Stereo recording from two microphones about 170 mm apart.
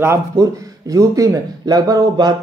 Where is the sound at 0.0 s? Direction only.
20° right (ahead or behind).